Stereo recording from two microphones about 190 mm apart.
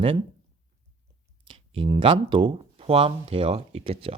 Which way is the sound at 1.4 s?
25° right (ahead or behind).